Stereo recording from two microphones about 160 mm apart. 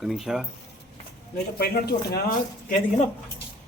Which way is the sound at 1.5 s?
75° left (ahead or behind).